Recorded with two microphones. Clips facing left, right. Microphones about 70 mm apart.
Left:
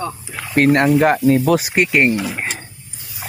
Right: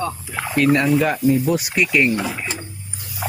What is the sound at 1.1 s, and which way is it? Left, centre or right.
Speech, left.